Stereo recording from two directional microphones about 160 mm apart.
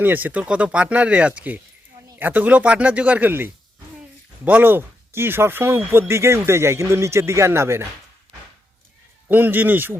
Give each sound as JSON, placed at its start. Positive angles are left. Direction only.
{"t": 0.0, "sound": "speech", "side_deg": -10}
{"t": 9.3, "sound": "speech", "side_deg": -10}